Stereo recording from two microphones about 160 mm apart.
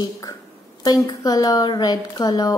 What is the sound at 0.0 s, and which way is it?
A woman's voice, 25° left (ahead or behind).